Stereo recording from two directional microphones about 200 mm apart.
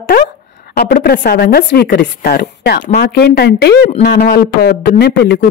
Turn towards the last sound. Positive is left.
turn(degrees=50)  # may be behind; listen again after turning